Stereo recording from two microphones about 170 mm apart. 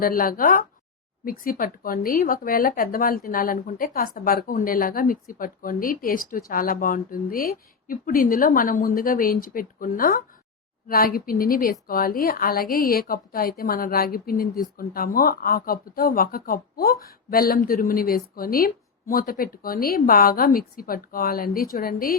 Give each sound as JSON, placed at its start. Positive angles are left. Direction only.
{"t": 0.0, "sound": "speech", "side_deg": 55}